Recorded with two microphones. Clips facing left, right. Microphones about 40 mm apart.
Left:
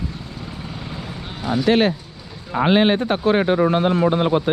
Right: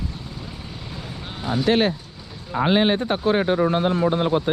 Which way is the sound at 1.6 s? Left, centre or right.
Left.